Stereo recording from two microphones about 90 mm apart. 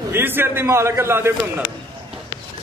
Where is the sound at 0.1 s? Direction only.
25° right (ahead or behind).